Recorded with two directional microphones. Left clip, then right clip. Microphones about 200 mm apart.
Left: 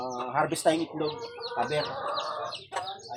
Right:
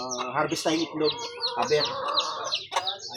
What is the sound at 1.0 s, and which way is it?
Speech, 35° left (ahead or behind).